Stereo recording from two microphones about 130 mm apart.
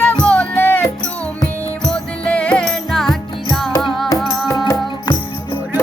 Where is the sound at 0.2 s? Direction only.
10° left (ahead or behind).